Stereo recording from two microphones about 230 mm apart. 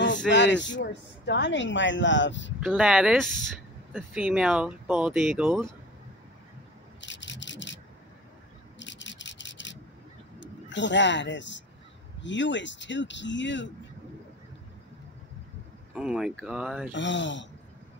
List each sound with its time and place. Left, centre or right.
0.3 s speech: left
2.6 s speech: centre
7.0 s rub: left
10.4 s speech: left
15.9 s speech: centre
16.9 s speech: left